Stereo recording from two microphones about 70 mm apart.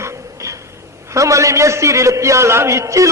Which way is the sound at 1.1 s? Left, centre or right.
Right.